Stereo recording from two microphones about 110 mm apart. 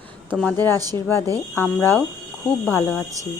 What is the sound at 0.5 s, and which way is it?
Speech, 20° left (ahead or behind).